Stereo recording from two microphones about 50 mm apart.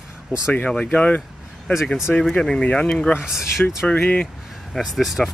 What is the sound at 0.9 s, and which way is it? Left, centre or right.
Speech, left.